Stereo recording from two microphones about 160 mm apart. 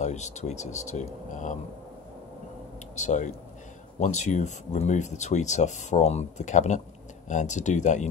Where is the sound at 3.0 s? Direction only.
50° left (ahead or behind).